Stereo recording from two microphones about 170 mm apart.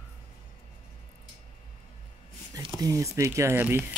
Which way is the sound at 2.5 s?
20° right (ahead or behind).